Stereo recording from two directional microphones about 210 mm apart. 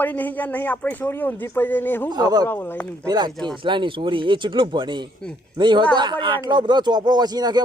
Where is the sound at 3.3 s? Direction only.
Centre (ahead or behind).